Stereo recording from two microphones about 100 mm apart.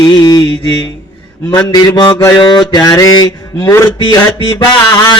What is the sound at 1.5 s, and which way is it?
Speech, 40° left (ahead or behind).